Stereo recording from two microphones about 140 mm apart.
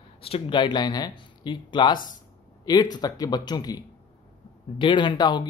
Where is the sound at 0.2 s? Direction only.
40° left (ahead or behind).